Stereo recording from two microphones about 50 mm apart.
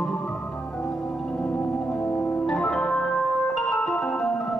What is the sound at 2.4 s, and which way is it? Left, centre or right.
Organ, centre.